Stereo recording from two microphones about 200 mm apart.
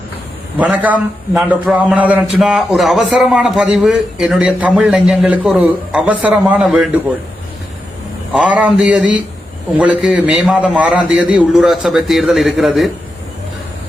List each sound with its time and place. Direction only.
0.6 s a man's voice: 5° right (ahead or behind)
8.3 s a man's voice: 5° right (ahead or behind)